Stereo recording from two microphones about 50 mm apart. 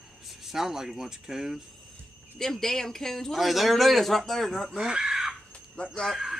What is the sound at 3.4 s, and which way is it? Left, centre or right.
Speech, centre.